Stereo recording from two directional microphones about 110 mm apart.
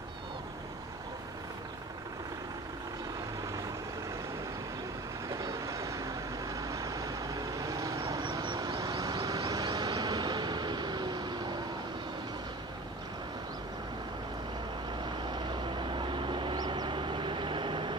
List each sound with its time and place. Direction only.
5.3 s vehicle: 30° right (ahead or behind)
15.3 s vehicle: 45° right (ahead or behind)